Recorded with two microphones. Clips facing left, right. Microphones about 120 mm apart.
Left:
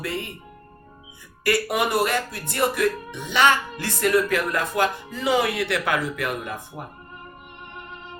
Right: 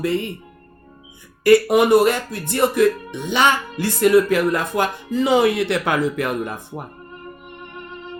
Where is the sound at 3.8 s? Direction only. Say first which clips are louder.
Right 9 dB; 20° right (ahead or behind).